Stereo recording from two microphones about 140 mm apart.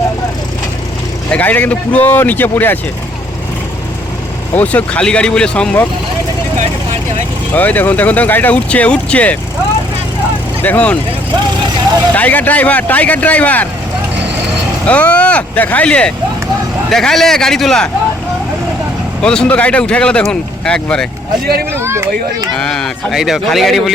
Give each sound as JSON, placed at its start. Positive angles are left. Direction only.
{"t": 1.3, "sound": "speech", "side_deg": 10}
{"t": 4.5, "sound": "speech", "side_deg": 10}
{"t": 7.5, "sound": "speech", "side_deg": 10}
{"t": 10.6, "sound": "speech", "side_deg": 10}
{"t": 12.1, "sound": "speech", "side_deg": 10}
{"t": 14.8, "sound": "speech", "side_deg": 10}
{"t": 19.2, "sound": "speech", "side_deg": 5}
{"t": 21.7, "sound": "speech", "side_deg": -20}
{"t": 22.5, "sound": "speech", "side_deg": 5}